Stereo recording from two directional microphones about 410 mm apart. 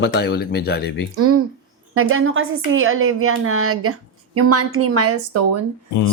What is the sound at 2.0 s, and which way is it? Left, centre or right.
A woman's voice, right.